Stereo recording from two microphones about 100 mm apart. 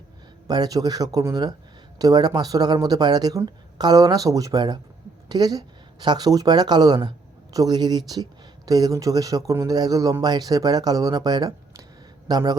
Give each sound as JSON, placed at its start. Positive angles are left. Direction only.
{"t": 0.4, "sound": "a man's voice", "side_deg": -40}